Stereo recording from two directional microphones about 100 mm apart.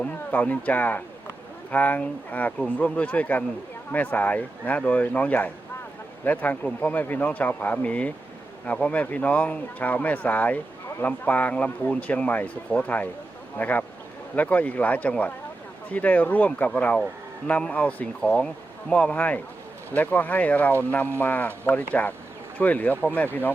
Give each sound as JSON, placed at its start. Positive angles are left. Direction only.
{"t": 0.0, "sound": "speech", "side_deg": 15}